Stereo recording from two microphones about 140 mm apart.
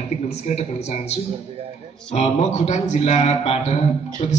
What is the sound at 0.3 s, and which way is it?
A man's voice, 50° left (ahead or behind).